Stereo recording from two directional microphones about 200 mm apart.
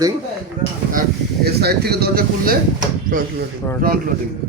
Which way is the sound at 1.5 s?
50° right (ahead or behind).